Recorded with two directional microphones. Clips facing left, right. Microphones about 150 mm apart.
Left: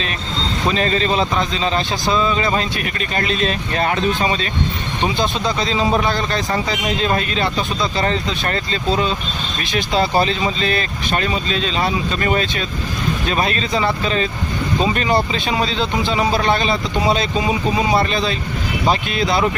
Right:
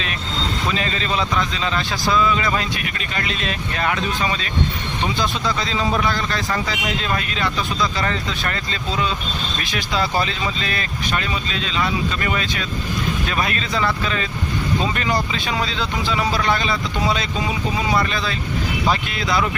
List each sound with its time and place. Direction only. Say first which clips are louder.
0.7 s speech: left 8 dB; 40° left (ahead or behind)